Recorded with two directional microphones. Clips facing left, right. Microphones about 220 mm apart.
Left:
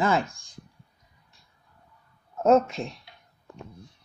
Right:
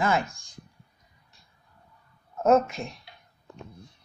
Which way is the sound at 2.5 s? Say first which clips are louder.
Left 1 dB; 30° left (ahead or behind).